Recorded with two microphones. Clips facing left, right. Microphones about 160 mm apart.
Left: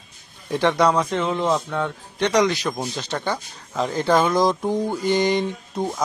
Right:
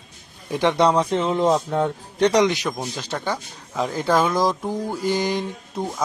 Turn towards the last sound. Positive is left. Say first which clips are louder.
# left 2 dB
turn(degrees=0)  # may be behind; listen again after turning